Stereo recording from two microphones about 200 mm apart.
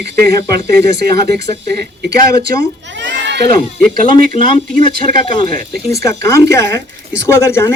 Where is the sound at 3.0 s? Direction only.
65° right (ahead or behind).